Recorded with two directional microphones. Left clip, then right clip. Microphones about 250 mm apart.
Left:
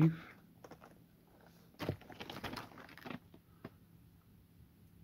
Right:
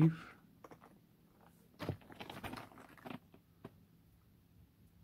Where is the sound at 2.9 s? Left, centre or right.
Centre.